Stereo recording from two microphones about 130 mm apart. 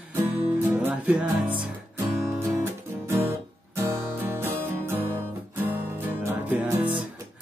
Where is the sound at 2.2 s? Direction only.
20° right (ahead or behind).